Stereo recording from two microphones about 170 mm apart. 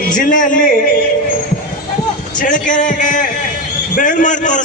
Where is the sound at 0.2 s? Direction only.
50° left (ahead or behind).